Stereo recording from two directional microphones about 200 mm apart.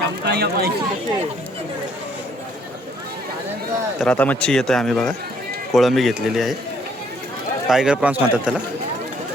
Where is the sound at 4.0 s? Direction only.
5° left (ahead or behind).